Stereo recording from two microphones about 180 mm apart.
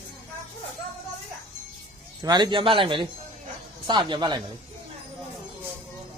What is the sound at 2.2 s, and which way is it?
A man's voice, 25° right (ahead or behind).